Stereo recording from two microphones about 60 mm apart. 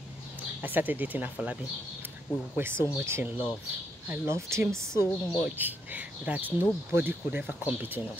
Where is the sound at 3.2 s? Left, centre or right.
Right.